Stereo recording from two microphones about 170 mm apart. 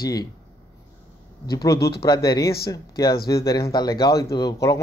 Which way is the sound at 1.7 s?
70° left (ahead or behind).